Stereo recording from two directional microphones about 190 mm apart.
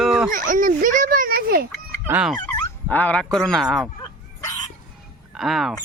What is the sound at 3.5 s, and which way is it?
Speech, centre (ahead or behind).